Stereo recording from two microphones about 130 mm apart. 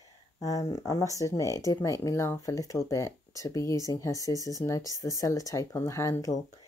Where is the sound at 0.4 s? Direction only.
25° left (ahead or behind).